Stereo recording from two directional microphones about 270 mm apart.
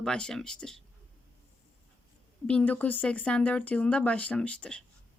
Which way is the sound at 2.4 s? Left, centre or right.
Centre.